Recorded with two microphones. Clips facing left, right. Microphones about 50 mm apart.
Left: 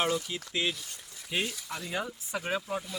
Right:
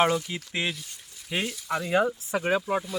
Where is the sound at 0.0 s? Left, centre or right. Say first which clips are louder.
Right 6 dB; right.